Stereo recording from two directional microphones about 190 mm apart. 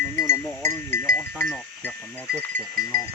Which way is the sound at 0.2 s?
15° left (ahead or behind).